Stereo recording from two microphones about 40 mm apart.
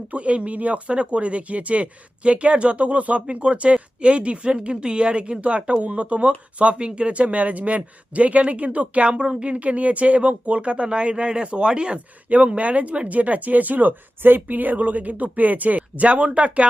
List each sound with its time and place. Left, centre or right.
0.1 s speech: right
9.1 s speech: centre
9.5 s speech: right
12.3 s speech: right
14.2 s speech: right